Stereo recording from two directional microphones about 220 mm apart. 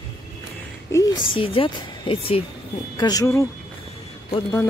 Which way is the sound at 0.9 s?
15° left (ahead or behind).